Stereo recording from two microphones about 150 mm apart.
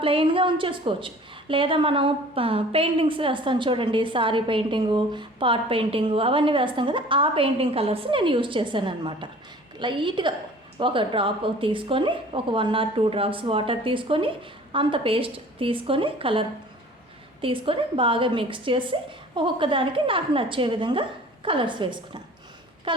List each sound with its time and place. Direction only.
0.0 s a woman's voice: 35° right (ahead or behind)